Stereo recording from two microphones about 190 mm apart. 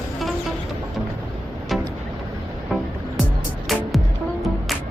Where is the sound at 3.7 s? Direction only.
Centre (ahead or behind).